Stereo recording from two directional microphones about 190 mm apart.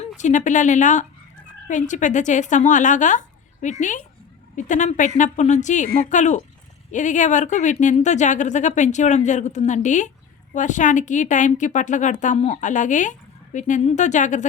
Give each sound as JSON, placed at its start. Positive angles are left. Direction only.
{"t": 0.2, "sound": "a woman's voice", "side_deg": 40}